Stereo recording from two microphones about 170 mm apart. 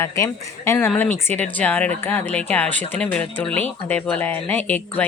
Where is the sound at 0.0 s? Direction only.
15° left (ahead or behind).